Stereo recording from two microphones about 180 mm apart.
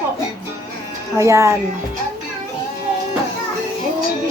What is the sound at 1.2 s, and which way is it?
Speech, 15° right (ahead or behind).